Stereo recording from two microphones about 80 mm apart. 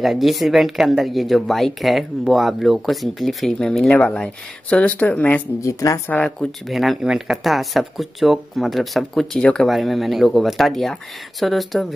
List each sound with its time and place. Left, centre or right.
0.0 s speech: centre
5.6 s speech: left
6.7 s speech: centre